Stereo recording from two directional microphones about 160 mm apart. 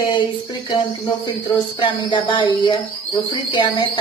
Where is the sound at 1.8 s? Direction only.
30° left (ahead or behind).